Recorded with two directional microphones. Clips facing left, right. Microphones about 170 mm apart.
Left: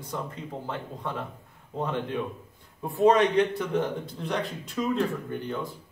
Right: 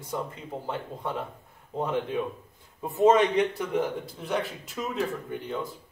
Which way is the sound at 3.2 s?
Centre (ahead or behind).